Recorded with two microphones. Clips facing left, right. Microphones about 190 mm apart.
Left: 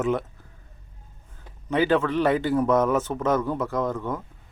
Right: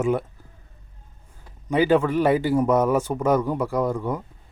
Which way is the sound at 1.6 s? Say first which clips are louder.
Right 3 dB; 15° right (ahead or behind).